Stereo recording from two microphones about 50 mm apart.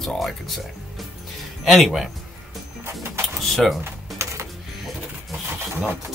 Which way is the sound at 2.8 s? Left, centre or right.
Right.